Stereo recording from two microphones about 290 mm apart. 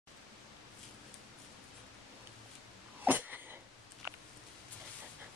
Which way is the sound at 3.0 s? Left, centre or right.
Centre.